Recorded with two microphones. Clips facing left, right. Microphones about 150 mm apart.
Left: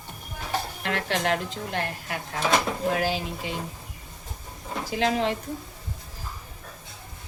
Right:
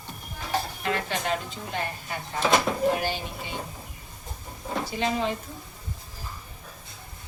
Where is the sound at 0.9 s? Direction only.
80° left.